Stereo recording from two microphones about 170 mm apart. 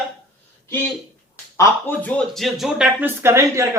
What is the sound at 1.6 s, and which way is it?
Speech, 10° left (ahead or behind).